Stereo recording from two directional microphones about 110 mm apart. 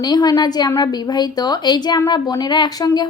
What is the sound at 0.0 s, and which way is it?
A woman's voice, 40° left (ahead or behind).